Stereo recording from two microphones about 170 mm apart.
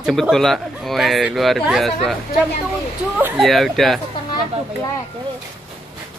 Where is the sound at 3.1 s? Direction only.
10° right (ahead or behind).